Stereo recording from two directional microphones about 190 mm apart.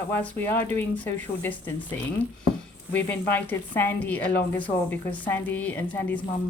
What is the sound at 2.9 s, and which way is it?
A woman's voice, 10° left (ahead or behind).